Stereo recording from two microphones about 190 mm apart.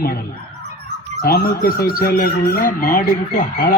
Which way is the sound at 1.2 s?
55° left (ahead or behind).